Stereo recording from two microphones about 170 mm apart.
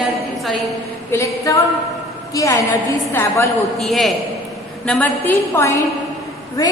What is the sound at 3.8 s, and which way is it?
A woman's voice, centre (ahead or behind).